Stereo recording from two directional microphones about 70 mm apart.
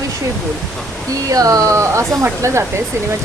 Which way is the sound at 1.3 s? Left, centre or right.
Right.